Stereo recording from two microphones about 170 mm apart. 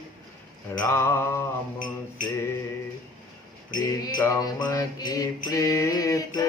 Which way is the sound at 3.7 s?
25° left (ahead or behind).